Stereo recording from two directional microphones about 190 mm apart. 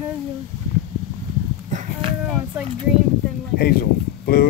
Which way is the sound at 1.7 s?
30° right (ahead or behind).